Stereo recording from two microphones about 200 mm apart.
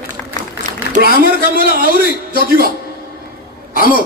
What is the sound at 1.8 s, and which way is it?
Speech, 45° right (ahead or behind).